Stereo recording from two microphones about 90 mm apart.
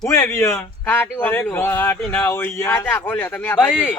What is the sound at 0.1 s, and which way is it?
Speech, 30° left (ahead or behind).